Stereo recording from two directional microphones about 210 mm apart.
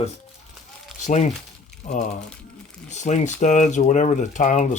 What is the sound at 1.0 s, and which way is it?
Speech, 35° left (ahead or behind).